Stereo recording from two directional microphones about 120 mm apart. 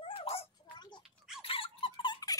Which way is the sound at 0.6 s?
40° left (ahead or behind).